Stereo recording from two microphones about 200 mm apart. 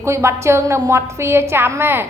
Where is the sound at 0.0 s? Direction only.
15° right (ahead or behind).